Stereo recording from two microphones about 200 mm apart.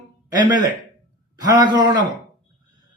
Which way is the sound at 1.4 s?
20° right (ahead or behind).